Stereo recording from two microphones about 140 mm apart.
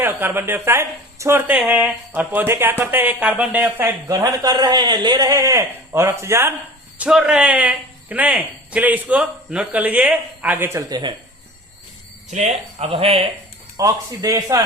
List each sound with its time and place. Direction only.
0.0 s speech: 15° right (ahead or behind)
7.0 s speech: 5° right (ahead or behind); by 11.1 s 30° right (ahead or behind)
12.3 s speech: 55° right (ahead or behind)
13.7 s speech: 25° right (ahead or behind)